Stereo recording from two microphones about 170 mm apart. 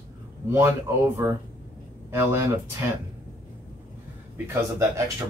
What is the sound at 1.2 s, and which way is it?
Speech, 15° right (ahead or behind).